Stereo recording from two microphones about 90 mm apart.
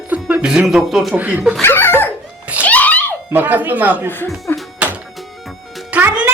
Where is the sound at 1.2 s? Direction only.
15° right (ahead or behind).